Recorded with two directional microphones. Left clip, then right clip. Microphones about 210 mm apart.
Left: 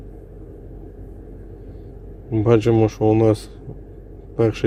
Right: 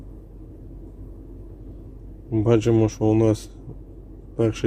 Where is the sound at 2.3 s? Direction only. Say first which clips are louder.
Left 3 dB; centre (ahead or behind).